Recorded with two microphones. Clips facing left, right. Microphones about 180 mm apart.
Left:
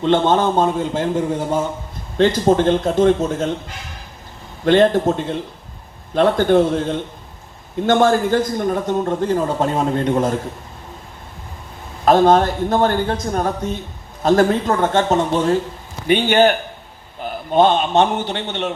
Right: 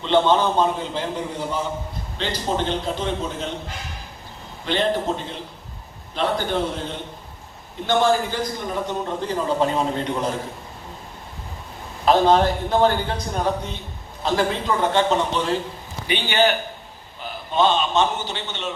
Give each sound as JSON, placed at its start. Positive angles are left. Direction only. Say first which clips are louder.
{"t": 0.0, "sound": "a man's voice", "louder": "left 3 dB", "side_deg": 50}
{"t": 4.6, "sound": "a man's voice", "louder": "left 9 dB", "side_deg": 50}
{"t": 12.0, "sound": "a man's voice", "louder": "left 4 dB", "side_deg": 50}